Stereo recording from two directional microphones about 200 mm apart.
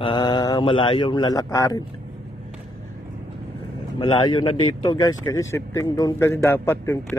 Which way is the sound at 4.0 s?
25° left (ahead or behind).